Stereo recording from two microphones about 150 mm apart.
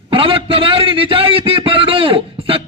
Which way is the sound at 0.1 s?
35° right (ahead or behind).